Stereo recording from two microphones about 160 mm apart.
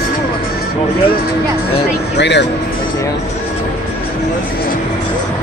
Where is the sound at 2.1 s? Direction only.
90° left.